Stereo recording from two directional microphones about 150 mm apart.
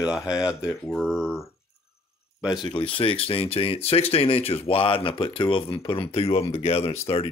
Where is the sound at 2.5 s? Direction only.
35° left (ahead or behind).